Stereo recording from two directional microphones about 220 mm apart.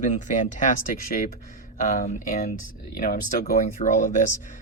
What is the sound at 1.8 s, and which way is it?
Speech, 35° left (ahead or behind).